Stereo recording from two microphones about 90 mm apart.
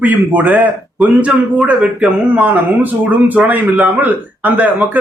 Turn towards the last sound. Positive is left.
turn(degrees=-20)  # may be behind; listen again after turning